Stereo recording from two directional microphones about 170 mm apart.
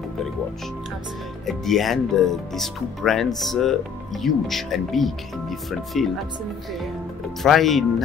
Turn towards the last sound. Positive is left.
turn(degrees=0)  # may be behind; listen again after turning